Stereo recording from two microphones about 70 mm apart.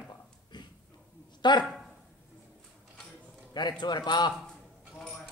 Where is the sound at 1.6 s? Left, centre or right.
Centre.